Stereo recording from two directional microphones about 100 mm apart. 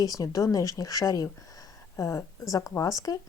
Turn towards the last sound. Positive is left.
turn(degrees=35)  # may be behind; listen again after turning